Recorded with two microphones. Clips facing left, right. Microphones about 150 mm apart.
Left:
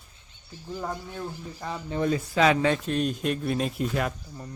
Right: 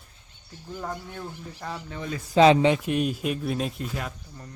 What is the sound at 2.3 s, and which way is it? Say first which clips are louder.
Speech: right 6 dB; 25° right (ahead or behind).